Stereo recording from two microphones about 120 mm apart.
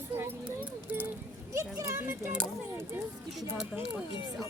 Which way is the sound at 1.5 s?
25° right (ahead or behind).